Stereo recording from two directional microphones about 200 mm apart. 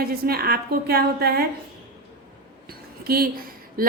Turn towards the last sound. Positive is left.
turn(degrees=-50)  # may be behind; listen again after turning